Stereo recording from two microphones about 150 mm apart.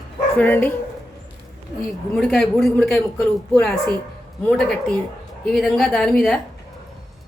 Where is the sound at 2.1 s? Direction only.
Centre (ahead or behind).